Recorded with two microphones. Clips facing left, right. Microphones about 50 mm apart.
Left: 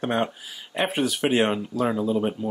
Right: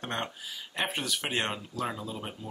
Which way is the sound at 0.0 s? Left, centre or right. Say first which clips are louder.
Left 10 dB; centre.